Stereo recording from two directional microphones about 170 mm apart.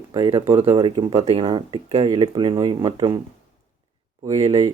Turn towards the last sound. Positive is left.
turn(degrees=-40)  # may be behind; listen again after turning